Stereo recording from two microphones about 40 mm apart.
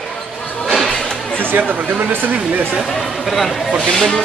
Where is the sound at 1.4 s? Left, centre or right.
Right.